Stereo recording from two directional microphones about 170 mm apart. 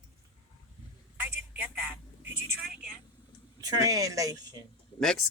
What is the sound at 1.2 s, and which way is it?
Telephone, 15° right (ahead or behind).